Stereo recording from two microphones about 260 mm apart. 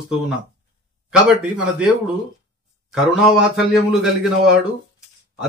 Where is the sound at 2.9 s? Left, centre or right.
Centre.